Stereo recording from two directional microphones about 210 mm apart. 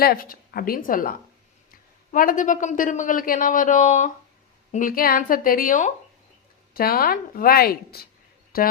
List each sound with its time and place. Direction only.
0.0 s a man's voice: 45° left (ahead or behind)